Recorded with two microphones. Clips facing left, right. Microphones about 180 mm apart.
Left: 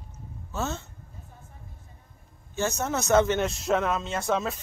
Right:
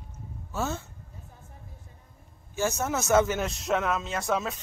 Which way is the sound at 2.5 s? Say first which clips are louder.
Even; 10° right (ahead or behind).